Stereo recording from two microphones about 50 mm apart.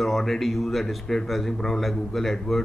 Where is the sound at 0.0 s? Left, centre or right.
Centre.